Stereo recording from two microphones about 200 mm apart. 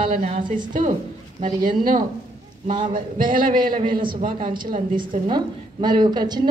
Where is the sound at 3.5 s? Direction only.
25° right (ahead or behind).